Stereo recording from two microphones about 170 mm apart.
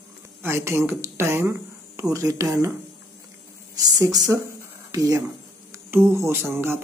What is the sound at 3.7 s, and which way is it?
Speech, 20° right (ahead or behind).